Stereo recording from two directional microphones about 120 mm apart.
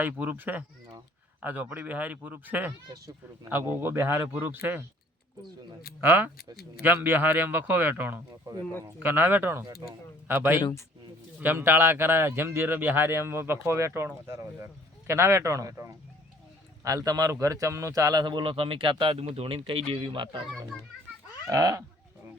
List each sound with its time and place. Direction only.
0.0 s speech: 15° right (ahead or behind)
6.0 s a man's voice: 15° right (ahead or behind)
10.6 s speech: 30° left (ahead or behind)
11.3 s a man's voice: 20° right (ahead or behind); by 20.4 s 45° right (ahead or behind)
21.5 s a man's voice: 30° right (ahead or behind)